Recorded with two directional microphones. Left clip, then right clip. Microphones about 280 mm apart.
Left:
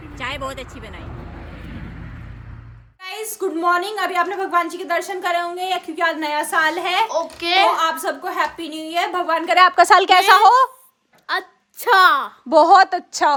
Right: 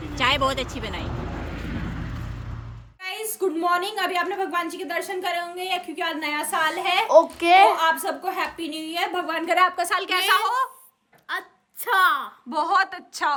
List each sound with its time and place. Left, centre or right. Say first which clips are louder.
0.2 s a woman's voice: right 6 dB; centre
1.0 s vehicle: right 4 dB; left
3.0 s a woman's voice: left 1 dB; centre
7.2 s a woman's voice: right 7 dB; centre
9.6 s a woman's voice: left 11 dB; left